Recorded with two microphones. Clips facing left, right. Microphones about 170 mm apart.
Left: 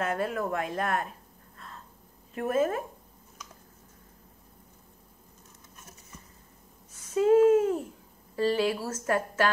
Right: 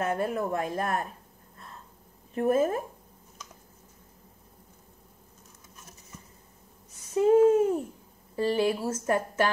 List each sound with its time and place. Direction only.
0.0 s speech: 20° right (ahead or behind)
0.6 s speech: 30° right (ahead or behind)
2.3 s speech: 30° right (ahead or behind)
7.2 s a sound: 20° right (ahead or behind)
8.4 s a woman's voice: 15° right (ahead or behind)